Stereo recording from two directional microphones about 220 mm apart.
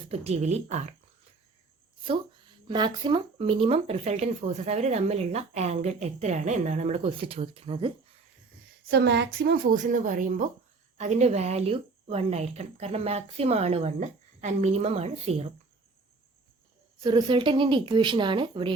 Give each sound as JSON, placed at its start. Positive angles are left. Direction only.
{"t": 0.1, "sound": "a woman's voice", "side_deg": -30}
{"t": 2.6, "sound": "speech", "side_deg": -20}
{"t": 8.9, "sound": "a woman's voice", "side_deg": -50}
{"t": 17.0, "sound": "speech", "side_deg": -20}